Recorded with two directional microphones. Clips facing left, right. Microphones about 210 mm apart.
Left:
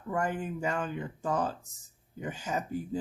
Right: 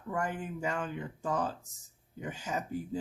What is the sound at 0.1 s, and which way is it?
Speech, 45° left (ahead or behind).